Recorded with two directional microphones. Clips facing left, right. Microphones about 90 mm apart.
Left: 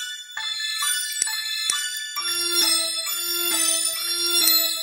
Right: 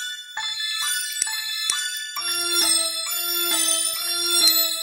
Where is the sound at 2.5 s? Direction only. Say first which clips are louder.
Right 1 dB; centre (ahead or behind).